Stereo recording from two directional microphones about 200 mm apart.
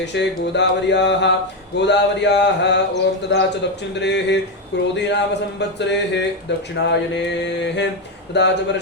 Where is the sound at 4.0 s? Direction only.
60° left (ahead or behind).